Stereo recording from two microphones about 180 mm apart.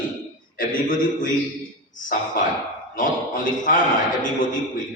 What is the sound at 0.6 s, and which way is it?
A man's voice, 50° left (ahead or behind).